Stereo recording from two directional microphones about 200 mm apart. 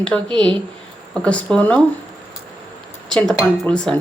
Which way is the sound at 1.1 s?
5° left (ahead or behind).